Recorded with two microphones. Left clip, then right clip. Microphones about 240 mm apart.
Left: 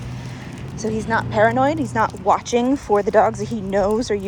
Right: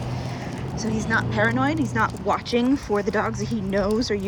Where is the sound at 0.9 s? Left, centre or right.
Centre.